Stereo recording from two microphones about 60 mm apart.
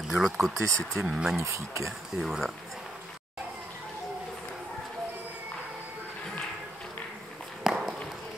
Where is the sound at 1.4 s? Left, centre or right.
Right.